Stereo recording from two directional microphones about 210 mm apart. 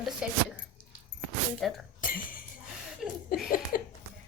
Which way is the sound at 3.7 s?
45° left (ahead or behind).